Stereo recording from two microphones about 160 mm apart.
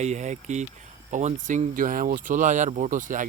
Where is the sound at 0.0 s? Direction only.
45° right (ahead or behind).